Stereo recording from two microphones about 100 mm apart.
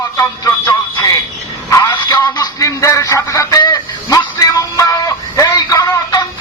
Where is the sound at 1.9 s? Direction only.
45° left (ahead or behind).